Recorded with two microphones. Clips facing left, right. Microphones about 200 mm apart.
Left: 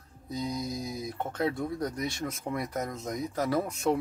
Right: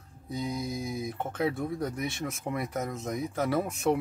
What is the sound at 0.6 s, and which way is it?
Speech, 25° right (ahead or behind).